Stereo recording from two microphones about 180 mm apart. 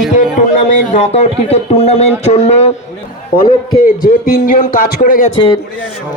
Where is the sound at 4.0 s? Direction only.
55° left (ahead or behind).